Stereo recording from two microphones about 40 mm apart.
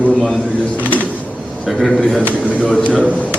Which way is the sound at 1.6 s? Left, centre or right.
Centre.